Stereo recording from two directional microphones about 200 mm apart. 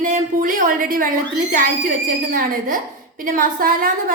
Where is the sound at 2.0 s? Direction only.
45° right (ahead or behind).